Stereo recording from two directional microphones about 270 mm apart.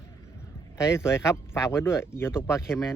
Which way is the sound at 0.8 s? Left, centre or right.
Centre.